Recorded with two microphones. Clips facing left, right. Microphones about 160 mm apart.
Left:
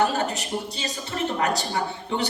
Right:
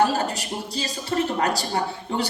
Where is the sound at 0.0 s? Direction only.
35° right (ahead or behind).